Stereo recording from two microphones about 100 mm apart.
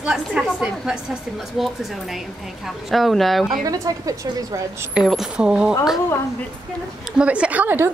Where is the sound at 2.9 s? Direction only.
Centre (ahead or behind).